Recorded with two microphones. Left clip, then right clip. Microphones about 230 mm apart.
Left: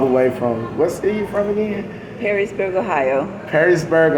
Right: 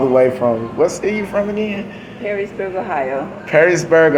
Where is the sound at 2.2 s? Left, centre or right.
Left.